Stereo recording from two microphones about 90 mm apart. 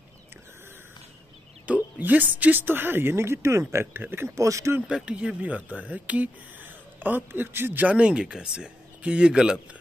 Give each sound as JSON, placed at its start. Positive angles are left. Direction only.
{"t": 1.7, "sound": "speech", "side_deg": -20}
{"t": 4.5, "sound": "speech", "side_deg": -35}
{"t": 4.8, "sound": "speech", "side_deg": -10}